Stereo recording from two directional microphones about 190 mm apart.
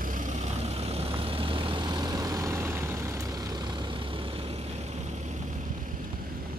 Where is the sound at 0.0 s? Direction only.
45° right (ahead or behind).